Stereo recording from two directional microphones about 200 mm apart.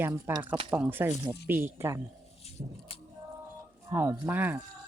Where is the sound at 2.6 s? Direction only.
35° right (ahead or behind).